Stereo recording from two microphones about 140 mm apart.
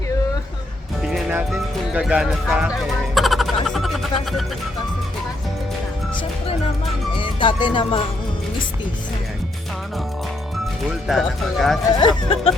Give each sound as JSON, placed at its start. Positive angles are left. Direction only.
{"t": 1.5, "sound": "music", "side_deg": -5}
{"t": 7.2, "sound": "speech", "side_deg": 35}
{"t": 11.1, "sound": "speech", "side_deg": 0}
{"t": 11.9, "sound": "speech", "side_deg": 40}